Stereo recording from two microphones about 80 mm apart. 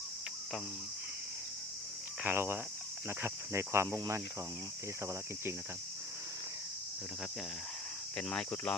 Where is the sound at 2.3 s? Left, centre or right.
Right.